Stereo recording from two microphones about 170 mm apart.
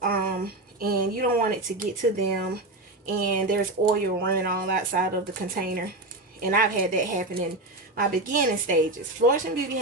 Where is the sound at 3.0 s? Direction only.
60° right (ahead or behind).